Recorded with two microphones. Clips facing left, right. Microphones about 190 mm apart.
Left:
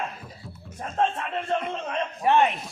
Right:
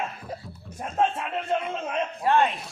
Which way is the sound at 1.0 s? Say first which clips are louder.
Right 1 dB; 10° right (ahead or behind).